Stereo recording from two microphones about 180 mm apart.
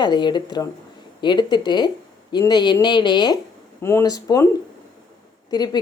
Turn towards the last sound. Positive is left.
turn(degrees=20)  # may be behind; listen again after turning